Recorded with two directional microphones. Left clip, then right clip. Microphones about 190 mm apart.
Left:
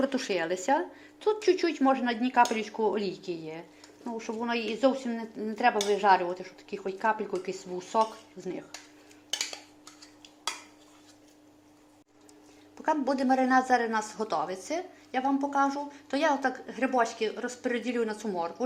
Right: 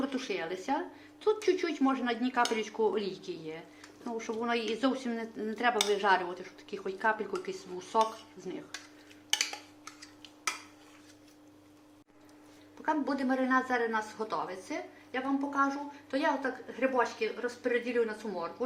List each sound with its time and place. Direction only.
0.0 s speech: 35° left (ahead or behind)
12.8 s a woman's voice: 35° left (ahead or behind)